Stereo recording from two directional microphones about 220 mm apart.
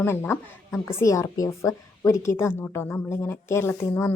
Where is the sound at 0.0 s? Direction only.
10° left (ahead or behind).